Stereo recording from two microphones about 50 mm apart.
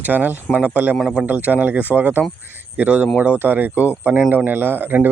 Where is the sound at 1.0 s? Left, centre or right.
Centre.